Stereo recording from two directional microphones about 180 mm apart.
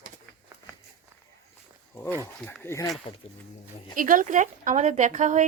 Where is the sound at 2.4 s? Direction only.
10° left (ahead or behind).